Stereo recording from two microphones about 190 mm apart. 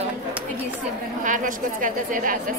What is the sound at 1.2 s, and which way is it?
A woman's voice, 45° right (ahead or behind).